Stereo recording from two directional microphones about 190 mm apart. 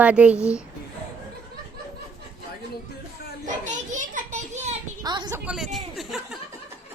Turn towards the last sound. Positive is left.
turn(degrees=0)  # may be behind; listen again after turning